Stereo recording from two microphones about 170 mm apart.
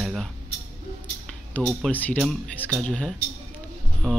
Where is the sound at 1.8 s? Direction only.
10° left (ahead or behind).